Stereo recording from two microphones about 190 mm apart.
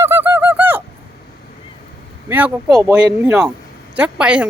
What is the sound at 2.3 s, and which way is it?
Speech, 10° right (ahead or behind).